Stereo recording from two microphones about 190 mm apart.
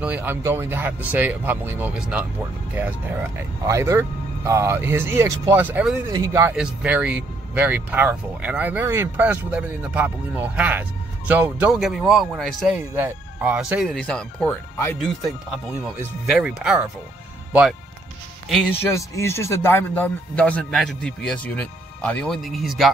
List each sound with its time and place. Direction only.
0.0 s speech: 10° right (ahead or behind)
6.5 s speech: 5° right (ahead or behind)
12.7 s speech: 10° right (ahead or behind); by 15.0 s 10° left (ahead or behind)
15.2 s speech: 5° right (ahead or behind)
18.9 s speech: 15° left (ahead or behind)